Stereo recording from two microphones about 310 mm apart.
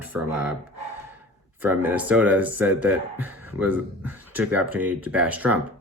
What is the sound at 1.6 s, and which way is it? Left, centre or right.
Speech, centre.